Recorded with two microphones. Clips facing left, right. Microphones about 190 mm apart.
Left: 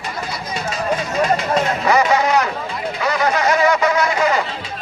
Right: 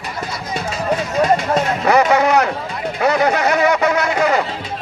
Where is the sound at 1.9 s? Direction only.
60° right (ahead or behind).